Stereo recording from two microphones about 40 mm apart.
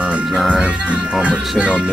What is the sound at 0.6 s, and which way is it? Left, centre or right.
Speech, right.